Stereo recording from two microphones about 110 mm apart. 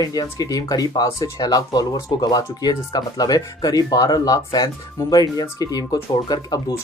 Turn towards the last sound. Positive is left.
turn(degrees=35)  # may be behind; listen again after turning